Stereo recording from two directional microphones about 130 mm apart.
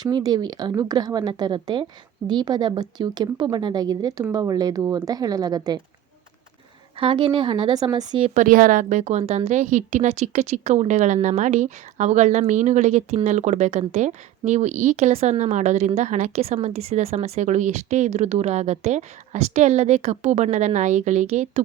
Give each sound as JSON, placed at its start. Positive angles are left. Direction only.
{"t": 0.0, "sound": "a woman's voice", "side_deg": -30}
{"t": 7.0, "sound": "a woman's voice", "side_deg": -40}
{"t": 8.3, "sound": "a woman's voice", "side_deg": -85}